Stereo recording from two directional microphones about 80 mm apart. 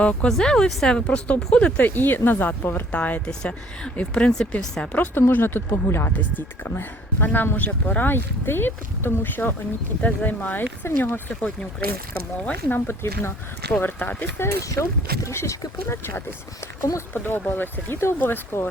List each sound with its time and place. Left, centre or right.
0.0 s speech: centre
13.7 s speech: left
17.2 s speech: left